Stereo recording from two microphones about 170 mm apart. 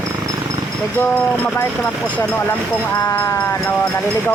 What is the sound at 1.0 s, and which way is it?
Speech, 15° left (ahead or behind).